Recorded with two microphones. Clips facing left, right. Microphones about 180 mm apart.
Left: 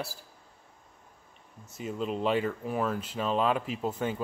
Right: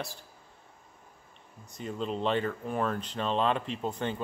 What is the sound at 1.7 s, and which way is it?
Speech, 5° left (ahead or behind).